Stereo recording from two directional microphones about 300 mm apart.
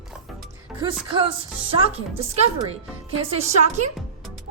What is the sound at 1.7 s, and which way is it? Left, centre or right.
Speech, centre.